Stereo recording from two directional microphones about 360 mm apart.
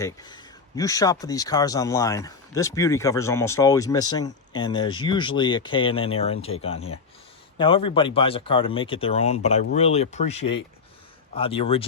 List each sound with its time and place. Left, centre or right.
0.0 s speech: centre